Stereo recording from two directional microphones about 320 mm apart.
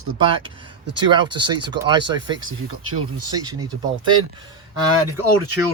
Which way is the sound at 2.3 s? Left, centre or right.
Right.